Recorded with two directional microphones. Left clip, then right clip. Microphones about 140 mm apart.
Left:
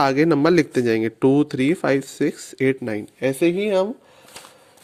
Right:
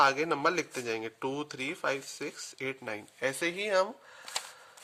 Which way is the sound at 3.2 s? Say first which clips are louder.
Left 12 dB; 10° left (ahead or behind).